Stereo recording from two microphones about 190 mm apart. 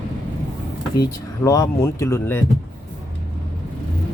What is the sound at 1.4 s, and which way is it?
Speech, 15° left (ahead or behind).